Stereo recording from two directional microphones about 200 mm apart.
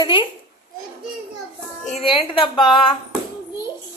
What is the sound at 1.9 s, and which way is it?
Speech, 25° left (ahead or behind).